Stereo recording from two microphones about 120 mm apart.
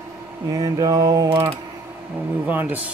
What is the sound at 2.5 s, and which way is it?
Speech, 15° right (ahead or behind).